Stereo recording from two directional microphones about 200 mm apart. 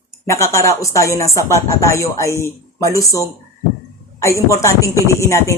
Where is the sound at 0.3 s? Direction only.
15° left (ahead or behind).